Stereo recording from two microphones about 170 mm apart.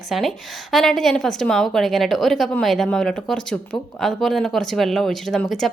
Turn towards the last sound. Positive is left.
turn(degrees=0)  # may be behind; listen again after turning